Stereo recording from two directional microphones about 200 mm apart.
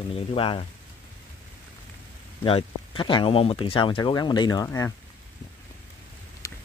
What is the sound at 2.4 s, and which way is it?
Speech, 25° left (ahead or behind).